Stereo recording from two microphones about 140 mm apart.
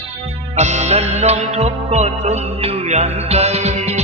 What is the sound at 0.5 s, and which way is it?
Music, 55° right (ahead or behind).